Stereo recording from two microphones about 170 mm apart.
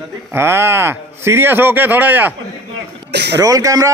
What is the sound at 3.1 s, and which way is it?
Speech, 80° right.